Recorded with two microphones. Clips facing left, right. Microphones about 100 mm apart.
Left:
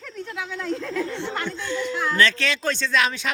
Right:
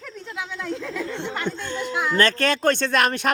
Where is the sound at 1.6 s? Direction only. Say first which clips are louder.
Left 2 dB; 50° right (ahead or behind).